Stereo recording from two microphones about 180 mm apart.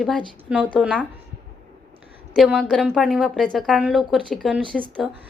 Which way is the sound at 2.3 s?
Centre (ahead or behind).